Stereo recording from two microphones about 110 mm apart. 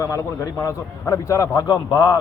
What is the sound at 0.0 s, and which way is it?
A man's voice, 30° left (ahead or behind).